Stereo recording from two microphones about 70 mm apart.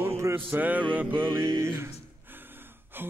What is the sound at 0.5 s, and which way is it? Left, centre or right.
Music, right.